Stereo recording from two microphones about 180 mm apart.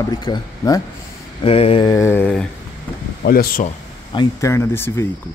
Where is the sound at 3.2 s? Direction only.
55° left (ahead or behind).